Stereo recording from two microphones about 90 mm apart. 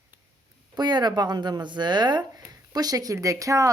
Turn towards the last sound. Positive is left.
turn(degrees=-40)  # may be behind; listen again after turning